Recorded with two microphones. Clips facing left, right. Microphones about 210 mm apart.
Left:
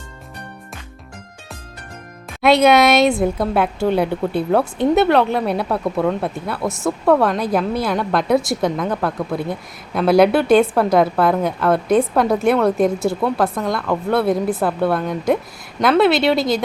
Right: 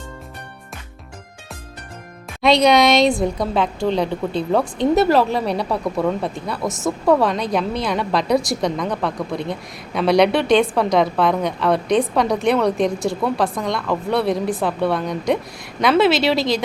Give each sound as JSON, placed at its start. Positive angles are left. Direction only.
{"t": 2.4, "sound": "a woman's voice", "side_deg": 5}
{"t": 6.7, "sound": "speech", "side_deg": -20}
{"t": 7.0, "sound": "a woman's voice", "side_deg": 0}